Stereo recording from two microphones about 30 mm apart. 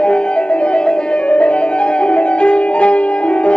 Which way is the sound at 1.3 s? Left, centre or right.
Left.